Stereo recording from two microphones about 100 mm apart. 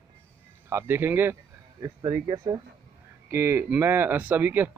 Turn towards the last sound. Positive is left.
turn(degrees=-20)  # may be behind; listen again after turning